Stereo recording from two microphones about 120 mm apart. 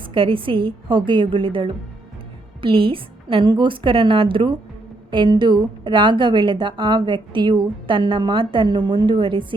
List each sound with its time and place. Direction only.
0.0 s a woman's voice: 45° right (ahead or behind)